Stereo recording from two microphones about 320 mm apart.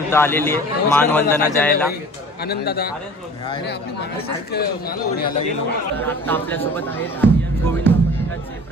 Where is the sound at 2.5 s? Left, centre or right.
Left.